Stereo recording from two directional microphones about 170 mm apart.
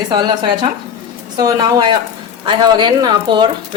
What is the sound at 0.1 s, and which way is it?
Speech, 25° right (ahead or behind).